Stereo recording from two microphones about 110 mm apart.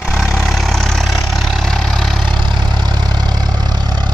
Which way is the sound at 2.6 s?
40° right (ahead or behind).